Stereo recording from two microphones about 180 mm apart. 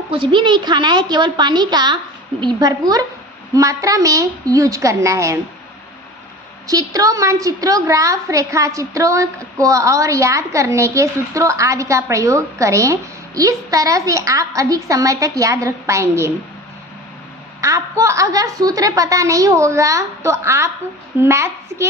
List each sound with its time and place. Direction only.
0.1 s a woman's voice: 25° right (ahead or behind)
6.7 s a woman's voice: 20° right (ahead or behind)
17.6 s a woman's voice: 15° right (ahead or behind)